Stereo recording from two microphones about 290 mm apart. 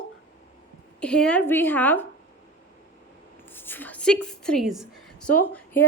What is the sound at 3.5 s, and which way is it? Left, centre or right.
A woman's voice, centre.